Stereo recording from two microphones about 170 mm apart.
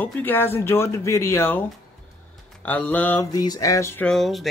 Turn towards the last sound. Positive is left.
turn(degrees=0)  # may be behind; listen again after turning